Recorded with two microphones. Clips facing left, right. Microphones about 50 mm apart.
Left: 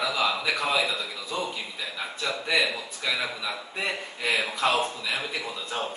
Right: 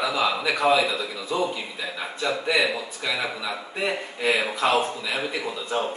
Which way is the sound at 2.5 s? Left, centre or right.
Centre.